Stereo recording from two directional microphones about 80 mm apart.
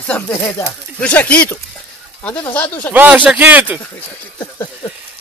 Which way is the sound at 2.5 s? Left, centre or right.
Left.